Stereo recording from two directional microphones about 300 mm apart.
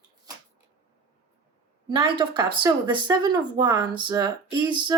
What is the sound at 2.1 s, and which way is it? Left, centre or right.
Speech, centre.